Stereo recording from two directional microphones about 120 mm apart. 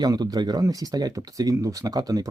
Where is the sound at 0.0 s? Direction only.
30° right (ahead or behind).